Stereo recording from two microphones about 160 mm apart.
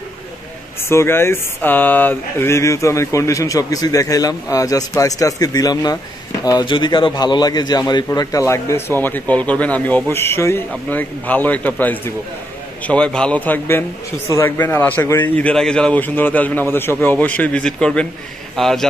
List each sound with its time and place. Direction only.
0.8 s a man's voice: 15° left (ahead or behind)